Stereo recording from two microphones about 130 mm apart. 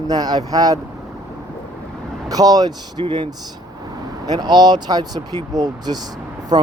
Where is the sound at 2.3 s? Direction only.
30° right (ahead or behind).